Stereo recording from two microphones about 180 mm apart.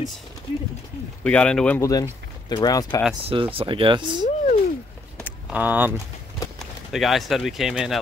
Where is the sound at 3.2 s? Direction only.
30° right (ahead or behind).